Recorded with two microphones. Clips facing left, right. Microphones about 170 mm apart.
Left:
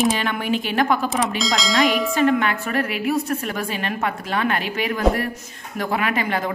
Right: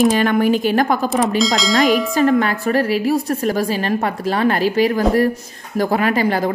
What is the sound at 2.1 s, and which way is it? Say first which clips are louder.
Speech: right 3 dB; 40° right (ahead or behind).